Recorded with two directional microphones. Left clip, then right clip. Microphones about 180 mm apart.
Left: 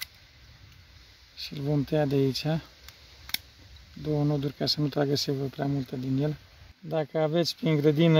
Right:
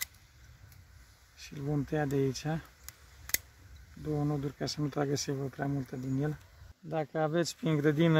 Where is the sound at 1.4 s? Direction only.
50° left (ahead or behind).